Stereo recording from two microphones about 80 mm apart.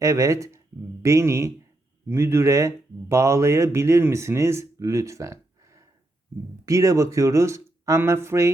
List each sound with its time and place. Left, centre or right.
0.0 s speech: right